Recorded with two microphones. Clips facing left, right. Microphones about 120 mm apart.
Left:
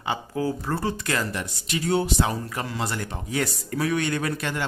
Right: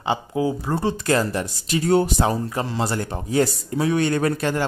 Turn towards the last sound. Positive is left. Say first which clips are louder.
# right 6 dB
turn(degrees=-40)  # may be behind; listen again after turning